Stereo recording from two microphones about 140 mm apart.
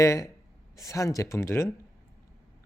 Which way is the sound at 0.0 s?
20° left (ahead or behind).